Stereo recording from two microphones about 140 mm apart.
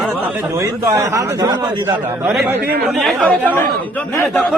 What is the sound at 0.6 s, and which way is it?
A man's voice, 20° right (ahead or behind).